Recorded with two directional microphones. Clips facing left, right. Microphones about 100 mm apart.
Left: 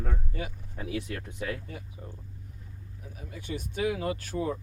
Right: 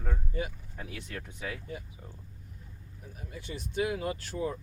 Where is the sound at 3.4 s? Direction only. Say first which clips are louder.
Left 4 dB; 50° left (ahead or behind).